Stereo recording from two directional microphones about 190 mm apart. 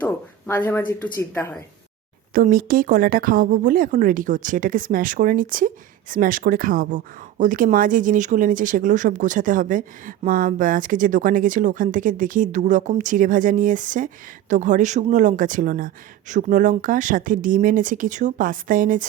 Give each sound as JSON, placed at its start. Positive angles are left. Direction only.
{"t": 0.0, "sound": "speech", "side_deg": 10}
{"t": 2.3, "sound": "speech", "side_deg": -45}